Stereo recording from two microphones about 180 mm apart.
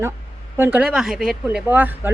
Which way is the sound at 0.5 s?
10° right (ahead or behind).